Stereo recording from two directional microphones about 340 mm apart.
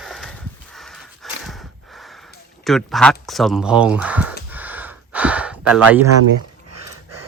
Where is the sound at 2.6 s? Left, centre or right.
Centre.